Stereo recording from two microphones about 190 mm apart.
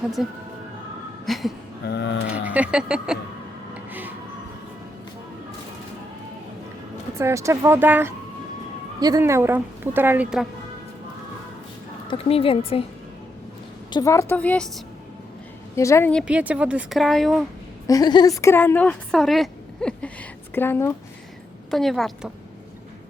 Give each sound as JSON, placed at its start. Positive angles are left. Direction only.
{"t": 0.2, "sound": "speech", "side_deg": -5}
{"t": 1.9, "sound": "speech", "side_deg": 70}
{"t": 2.3, "sound": "a woman's voice", "side_deg": -5}
{"t": 3.8, "sound": "printer", "side_deg": -10}
{"t": 7.2, "sound": "a woman's voice", "side_deg": -15}
{"t": 12.0, "sound": "a woman's voice", "side_deg": 30}
{"t": 13.9, "sound": "a woman's voice", "side_deg": 15}
{"t": 15.7, "sound": "a woman's voice", "side_deg": 15}
{"t": 16.2, "sound": "speech", "side_deg": -5}
{"t": 17.8, "sound": "a woman's voice", "side_deg": 20}
{"t": 21.7, "sound": "speech", "side_deg": 0}